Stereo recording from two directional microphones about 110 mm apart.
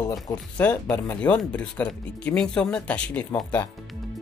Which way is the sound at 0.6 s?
15° left (ahead or behind).